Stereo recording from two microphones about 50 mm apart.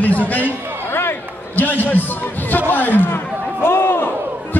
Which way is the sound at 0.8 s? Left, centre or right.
Left.